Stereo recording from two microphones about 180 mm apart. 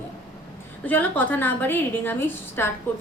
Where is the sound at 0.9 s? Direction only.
10° left (ahead or behind).